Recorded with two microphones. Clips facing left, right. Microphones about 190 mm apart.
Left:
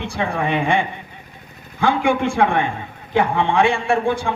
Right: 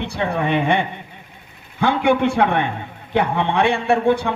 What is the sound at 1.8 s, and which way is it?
A woman's voice, 65° right (ahead or behind).